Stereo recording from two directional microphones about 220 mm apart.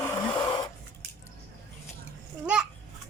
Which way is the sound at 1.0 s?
45° right (ahead or behind).